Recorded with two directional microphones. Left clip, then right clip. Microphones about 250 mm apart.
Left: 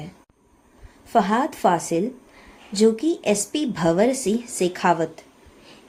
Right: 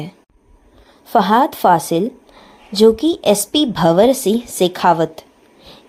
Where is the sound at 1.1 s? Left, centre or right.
Right.